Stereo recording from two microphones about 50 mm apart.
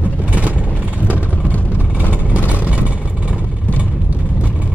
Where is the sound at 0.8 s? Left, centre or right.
Right.